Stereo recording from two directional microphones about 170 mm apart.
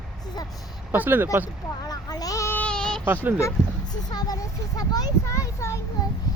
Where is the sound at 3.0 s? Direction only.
10° right (ahead or behind).